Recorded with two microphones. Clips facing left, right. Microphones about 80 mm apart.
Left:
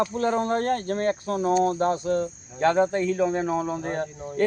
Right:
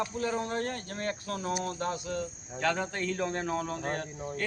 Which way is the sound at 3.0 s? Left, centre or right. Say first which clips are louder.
Left 8 dB; centre.